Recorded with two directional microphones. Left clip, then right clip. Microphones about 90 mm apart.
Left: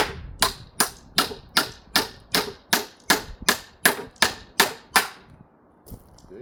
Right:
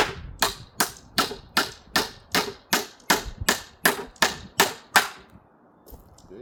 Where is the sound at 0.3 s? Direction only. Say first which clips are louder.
Left 2 dB; 10° left (ahead or behind).